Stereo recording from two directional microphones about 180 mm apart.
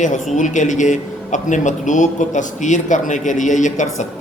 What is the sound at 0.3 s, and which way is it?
Speech, 45° left (ahead or behind).